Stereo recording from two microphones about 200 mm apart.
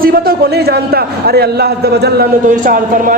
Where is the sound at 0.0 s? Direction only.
50° right (ahead or behind).